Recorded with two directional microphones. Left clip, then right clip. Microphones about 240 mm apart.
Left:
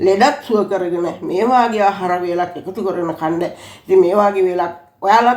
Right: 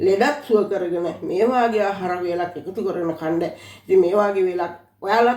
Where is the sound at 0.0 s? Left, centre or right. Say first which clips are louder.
Left 5 dB; left.